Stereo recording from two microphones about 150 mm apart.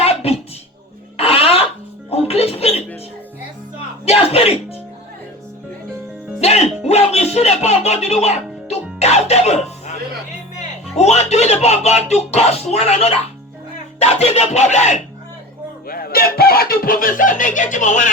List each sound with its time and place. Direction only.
0.0 s a sound: 40° left (ahead or behind)
2.0 s music: 40° left (ahead or behind)
4.0 s music: 40° left (ahead or behind)
6.4 s music: 45° left (ahead or behind)
10.9 s speech: 45° left (ahead or behind)
15.9 s speech: 85° left; by 18.1 s 55° left (ahead or behind)